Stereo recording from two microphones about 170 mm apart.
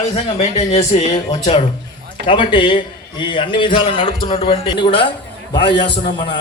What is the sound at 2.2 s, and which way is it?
A man's voice, 30° left (ahead or behind).